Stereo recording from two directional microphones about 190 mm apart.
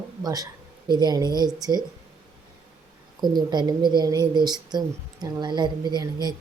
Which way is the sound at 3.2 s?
20° right (ahead or behind).